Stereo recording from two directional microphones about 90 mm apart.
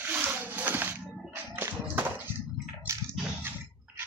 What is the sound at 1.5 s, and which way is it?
Music, 25° right (ahead or behind).